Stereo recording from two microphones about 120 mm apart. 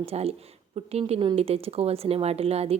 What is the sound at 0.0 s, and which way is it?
Speech, 60° right (ahead or behind).